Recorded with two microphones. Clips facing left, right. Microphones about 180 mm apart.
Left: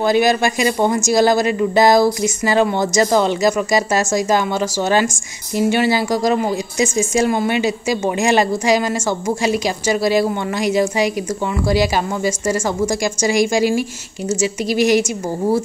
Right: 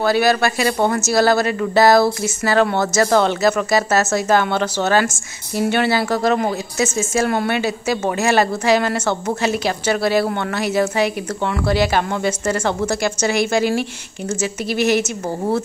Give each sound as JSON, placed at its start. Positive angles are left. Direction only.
{"t": 0.0, "sound": "a woman's voice", "side_deg": 15}